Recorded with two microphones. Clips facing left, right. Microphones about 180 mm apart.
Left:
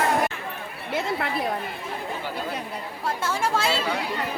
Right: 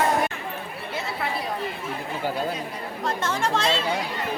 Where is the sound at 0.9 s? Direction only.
55° left (ahead or behind).